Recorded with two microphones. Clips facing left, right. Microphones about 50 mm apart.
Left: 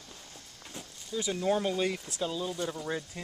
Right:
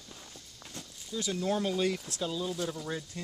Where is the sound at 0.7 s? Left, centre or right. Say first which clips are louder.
Left 2 dB; centre.